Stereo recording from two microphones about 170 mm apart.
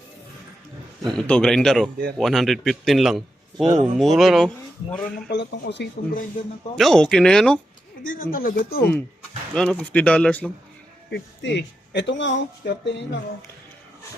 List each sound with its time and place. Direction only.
1.0 s a man's voice: 5° left (ahead or behind)
5.3 s speech: 90° left
6.7 s a man's voice: centre (ahead or behind)
8.0 s speech: 55° left (ahead or behind)
8.8 s a man's voice: 5° left (ahead or behind)
11.1 s speech: 90° left